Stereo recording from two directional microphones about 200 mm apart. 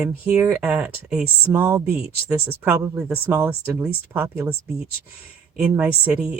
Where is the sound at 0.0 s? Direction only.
10° right (ahead or behind).